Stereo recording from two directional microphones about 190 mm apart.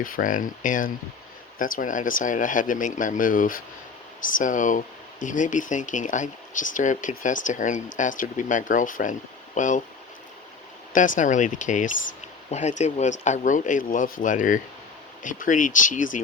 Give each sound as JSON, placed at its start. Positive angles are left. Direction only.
{"t": 0.0, "sound": "speech", "side_deg": 45}
{"t": 10.9, "sound": "speech", "side_deg": 45}